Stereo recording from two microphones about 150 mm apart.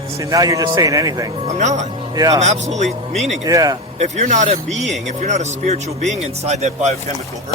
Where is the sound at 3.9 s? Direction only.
50° right (ahead or behind).